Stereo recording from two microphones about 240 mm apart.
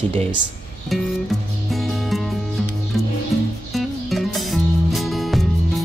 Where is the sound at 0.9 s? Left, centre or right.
Centre.